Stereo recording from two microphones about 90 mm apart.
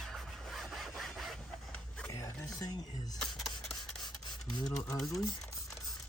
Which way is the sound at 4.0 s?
50° left (ahead or behind).